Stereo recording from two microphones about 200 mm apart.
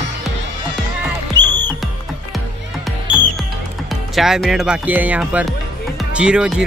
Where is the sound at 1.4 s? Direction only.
20° right (ahead or behind).